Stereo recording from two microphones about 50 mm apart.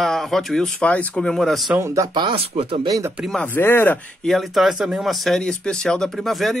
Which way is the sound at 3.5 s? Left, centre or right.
Left.